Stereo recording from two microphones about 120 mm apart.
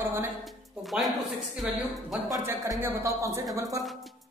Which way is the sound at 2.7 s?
20° right (ahead or behind).